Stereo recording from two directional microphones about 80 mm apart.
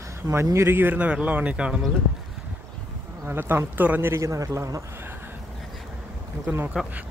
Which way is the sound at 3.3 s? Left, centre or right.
Right.